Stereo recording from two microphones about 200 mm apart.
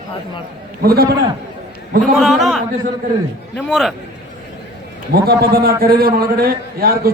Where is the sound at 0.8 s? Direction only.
50° right (ahead or behind).